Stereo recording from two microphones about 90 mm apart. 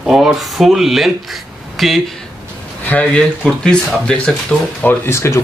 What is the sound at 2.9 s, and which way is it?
Speech, 15° left (ahead or behind).